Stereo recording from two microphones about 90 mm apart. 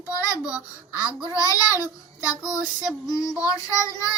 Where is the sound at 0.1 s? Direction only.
40° left (ahead or behind).